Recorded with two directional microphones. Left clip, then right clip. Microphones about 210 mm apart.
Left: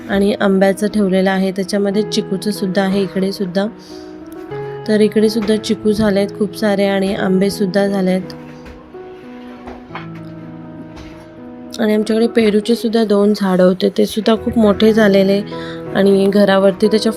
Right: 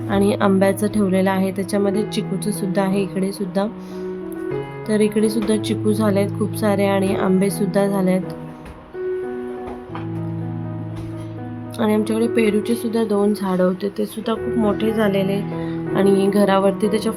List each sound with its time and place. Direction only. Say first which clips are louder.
0.1 s a woman's voice: left 3 dB; 10° left (ahead or behind)
4.9 s a woman's voice: left 5 dB; 10° left (ahead or behind)
11.8 s a woman's voice: left 5 dB; 10° left (ahead or behind)